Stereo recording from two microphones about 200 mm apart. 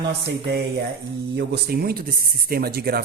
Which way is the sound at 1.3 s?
55° right (ahead or behind).